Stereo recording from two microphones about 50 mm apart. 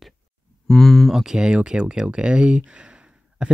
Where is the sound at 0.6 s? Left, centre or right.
Centre.